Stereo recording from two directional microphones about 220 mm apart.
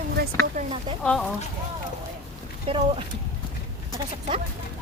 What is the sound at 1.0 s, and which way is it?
Speech, centre (ahead or behind).